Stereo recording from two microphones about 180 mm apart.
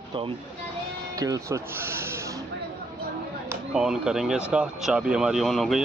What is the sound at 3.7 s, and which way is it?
Speech, 5° right (ahead or behind).